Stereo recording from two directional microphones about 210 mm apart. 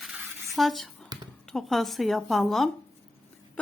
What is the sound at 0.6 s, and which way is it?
A woman's voice, centre (ahead or behind).